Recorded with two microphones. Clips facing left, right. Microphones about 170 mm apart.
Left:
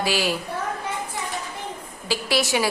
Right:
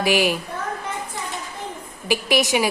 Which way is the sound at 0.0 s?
15° right (ahead or behind).